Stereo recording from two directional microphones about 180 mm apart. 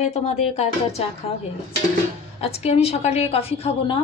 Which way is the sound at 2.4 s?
35° left (ahead or behind).